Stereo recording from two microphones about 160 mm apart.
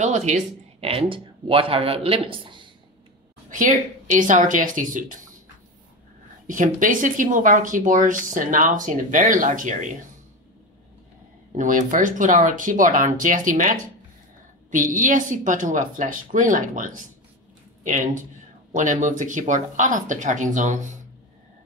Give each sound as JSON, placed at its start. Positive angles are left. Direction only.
{"t": 0.0, "sound": "speech", "side_deg": -45}
{"t": 3.4, "sound": "speech", "side_deg": -55}
{"t": 6.4, "sound": "speech", "side_deg": -55}
{"t": 11.5, "sound": "speech", "side_deg": -55}